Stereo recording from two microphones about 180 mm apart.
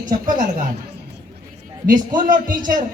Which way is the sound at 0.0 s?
45° right (ahead or behind).